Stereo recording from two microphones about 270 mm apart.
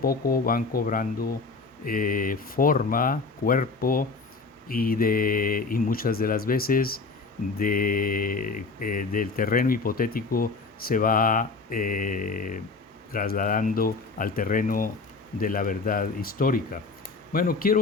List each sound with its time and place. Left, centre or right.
0.0 s speech: left